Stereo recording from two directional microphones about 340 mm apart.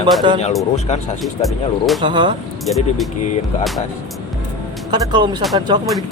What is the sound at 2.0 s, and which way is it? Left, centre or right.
Speech, centre.